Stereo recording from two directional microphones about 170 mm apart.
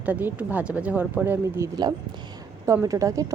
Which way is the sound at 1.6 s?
25° right (ahead or behind).